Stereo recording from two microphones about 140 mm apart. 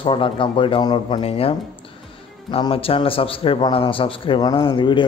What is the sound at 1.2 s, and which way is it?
Speech, 45° left (ahead or behind).